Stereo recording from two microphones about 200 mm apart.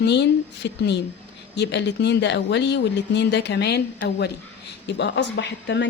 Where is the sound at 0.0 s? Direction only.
60° left (ahead or behind).